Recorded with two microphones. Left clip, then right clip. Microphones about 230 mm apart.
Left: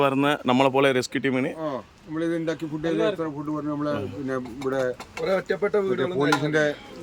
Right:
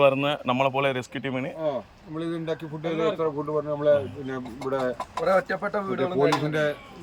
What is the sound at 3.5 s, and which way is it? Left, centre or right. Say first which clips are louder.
Speech: right 8 dB; left.